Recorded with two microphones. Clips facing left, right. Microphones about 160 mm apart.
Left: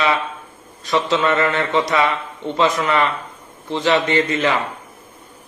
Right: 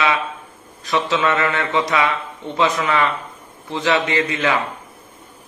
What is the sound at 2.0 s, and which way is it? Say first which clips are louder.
Speech: left 2 dB; centre (ahead or behind).